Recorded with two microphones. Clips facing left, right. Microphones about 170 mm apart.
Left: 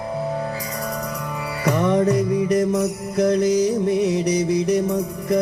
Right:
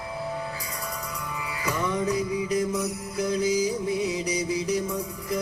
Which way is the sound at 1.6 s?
65° left (ahead or behind).